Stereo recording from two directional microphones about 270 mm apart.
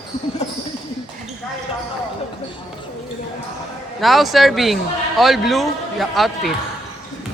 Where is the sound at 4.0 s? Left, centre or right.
Centre.